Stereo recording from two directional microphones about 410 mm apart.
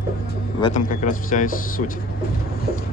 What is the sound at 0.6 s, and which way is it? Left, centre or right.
Speech, centre.